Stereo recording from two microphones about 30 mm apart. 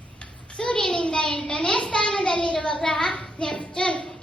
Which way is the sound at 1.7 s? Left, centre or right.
Left.